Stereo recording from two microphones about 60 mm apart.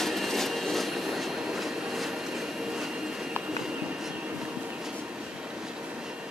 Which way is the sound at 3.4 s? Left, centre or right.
Centre.